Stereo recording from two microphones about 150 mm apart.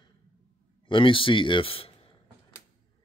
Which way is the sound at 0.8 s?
35° left (ahead or behind).